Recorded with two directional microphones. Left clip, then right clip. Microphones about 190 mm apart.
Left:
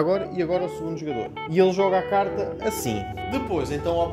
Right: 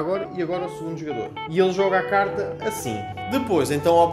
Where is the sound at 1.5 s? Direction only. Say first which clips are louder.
Even; 35° left (ahead or behind).